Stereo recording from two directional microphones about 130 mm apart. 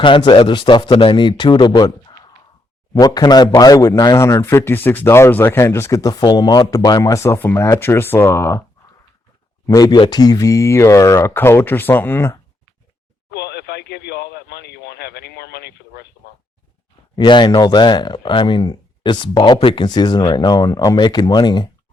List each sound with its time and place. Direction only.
0.0 s speech: 35° left (ahead or behind); by 8.6 s 20° left (ahead or behind)
9.6 s speech: 30° left (ahead or behind)
17.2 s speech: 35° left (ahead or behind)